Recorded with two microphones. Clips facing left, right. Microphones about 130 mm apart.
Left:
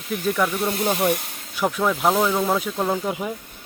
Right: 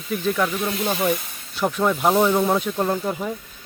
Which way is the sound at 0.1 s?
5° left (ahead or behind).